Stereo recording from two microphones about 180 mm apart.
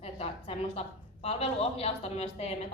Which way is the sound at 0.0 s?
35° left (ahead or behind).